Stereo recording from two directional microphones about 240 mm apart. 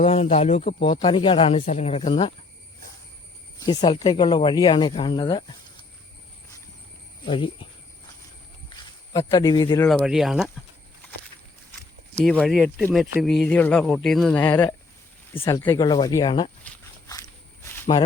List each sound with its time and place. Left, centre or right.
0.0 s speech: left
3.8 s speech: centre
7.3 s speech: left
8.7 s cricket: centre
9.8 s speech: centre
12.1 s speech: centre
15.4 s speech: centre
16.6 s walk: centre